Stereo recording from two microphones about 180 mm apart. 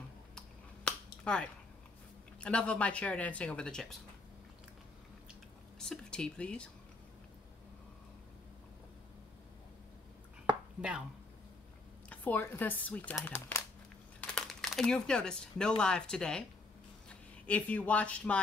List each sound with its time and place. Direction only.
0.8 s finger snapping: 5° left (ahead or behind)
2.4 s speech: 5° left (ahead or behind)
5.8 s speech: 5° left (ahead or behind)
12.1 s speech: 10° left (ahead or behind)